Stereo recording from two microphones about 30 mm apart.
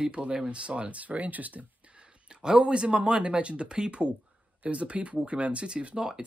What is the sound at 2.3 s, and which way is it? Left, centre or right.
Speech, right.